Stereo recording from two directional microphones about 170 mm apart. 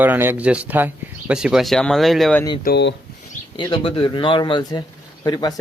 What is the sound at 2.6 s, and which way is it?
Speech, 80° left.